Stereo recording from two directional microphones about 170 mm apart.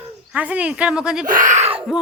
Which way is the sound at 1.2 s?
50° right (ahead or behind).